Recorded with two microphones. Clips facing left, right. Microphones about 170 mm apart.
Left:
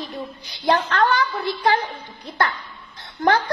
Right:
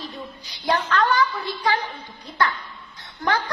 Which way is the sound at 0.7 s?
50° left (ahead or behind).